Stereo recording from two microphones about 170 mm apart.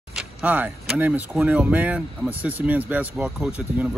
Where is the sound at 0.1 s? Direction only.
5° right (ahead or behind).